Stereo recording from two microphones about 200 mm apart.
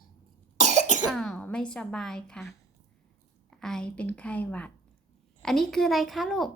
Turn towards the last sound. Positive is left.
turn(degrees=0)  # may be behind; listen again after turning